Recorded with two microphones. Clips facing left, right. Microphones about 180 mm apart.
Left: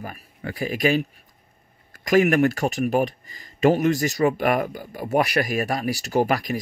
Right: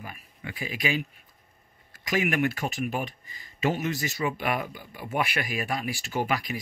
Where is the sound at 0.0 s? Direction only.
45° left (ahead or behind).